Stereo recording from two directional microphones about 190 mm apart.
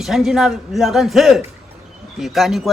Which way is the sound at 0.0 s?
Centre (ahead or behind).